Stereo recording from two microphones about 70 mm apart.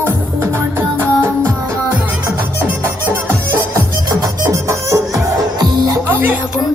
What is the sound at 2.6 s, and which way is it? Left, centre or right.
Music, right.